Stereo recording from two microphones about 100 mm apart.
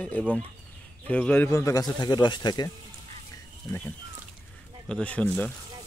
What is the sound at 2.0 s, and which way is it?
Speech, 45° left (ahead or behind).